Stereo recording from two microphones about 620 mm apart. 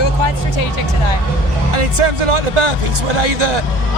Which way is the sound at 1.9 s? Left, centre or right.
Right.